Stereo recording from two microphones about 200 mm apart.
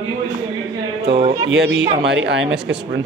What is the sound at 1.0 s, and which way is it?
Speech, 30° right (ahead or behind).